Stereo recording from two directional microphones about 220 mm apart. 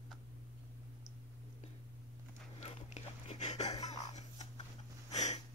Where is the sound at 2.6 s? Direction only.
30° left (ahead or behind).